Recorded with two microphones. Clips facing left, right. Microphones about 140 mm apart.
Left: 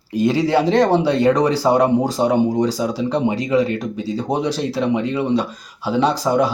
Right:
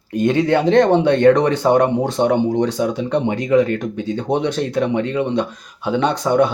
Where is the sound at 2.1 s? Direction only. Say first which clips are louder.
Even; 5° left (ahead or behind).